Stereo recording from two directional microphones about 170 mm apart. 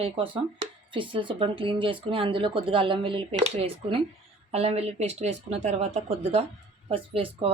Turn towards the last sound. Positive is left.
turn(degrees=-35)  # may be behind; listen again after turning